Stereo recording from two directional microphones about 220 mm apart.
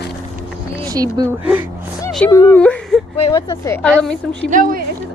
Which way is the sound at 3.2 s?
20° left (ahead or behind).